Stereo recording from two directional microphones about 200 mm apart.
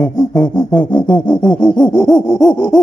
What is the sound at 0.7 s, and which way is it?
Gasp, 20° left (ahead or behind).